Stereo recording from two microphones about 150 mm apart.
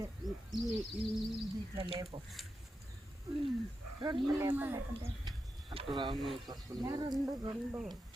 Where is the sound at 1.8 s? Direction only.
35° right (ahead or behind).